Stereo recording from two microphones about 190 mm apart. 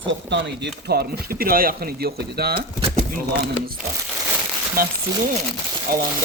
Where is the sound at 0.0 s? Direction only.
70° right (ahead or behind).